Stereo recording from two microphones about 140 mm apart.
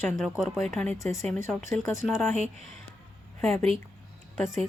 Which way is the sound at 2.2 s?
50° right (ahead or behind).